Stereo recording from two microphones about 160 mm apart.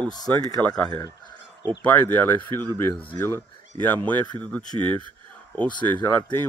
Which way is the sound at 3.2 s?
15° left (ahead or behind).